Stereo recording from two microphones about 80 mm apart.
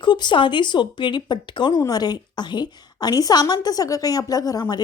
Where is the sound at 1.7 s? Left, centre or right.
Left.